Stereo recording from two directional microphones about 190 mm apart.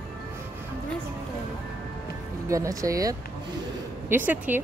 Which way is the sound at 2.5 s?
15° right (ahead or behind).